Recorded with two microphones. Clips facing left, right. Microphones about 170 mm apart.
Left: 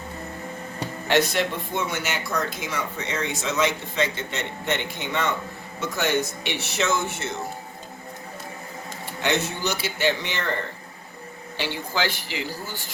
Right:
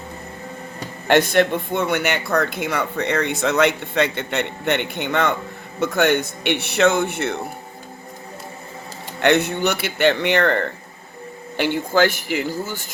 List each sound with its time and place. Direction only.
1.0 s speech: 55° right (ahead or behind)
9.2 s speech: 60° right (ahead or behind)